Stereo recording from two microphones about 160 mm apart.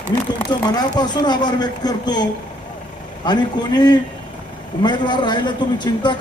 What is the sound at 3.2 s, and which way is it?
A man's voice, 25° left (ahead or behind).